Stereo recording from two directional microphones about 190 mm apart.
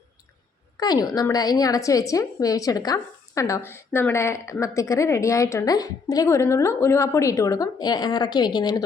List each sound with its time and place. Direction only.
0.8 s a woman's voice: 20° left (ahead or behind)